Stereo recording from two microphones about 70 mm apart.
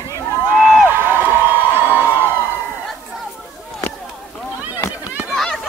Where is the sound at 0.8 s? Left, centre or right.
Right.